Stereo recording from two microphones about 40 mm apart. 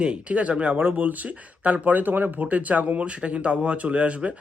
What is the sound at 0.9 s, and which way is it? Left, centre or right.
Speech, right.